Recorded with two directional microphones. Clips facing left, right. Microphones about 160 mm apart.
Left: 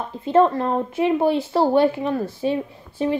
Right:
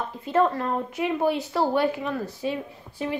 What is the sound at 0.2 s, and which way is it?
A woman's voice, 30° left (ahead or behind).